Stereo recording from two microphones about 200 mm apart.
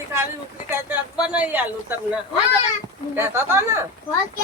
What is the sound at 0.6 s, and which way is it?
Speech, 5° right (ahead or behind).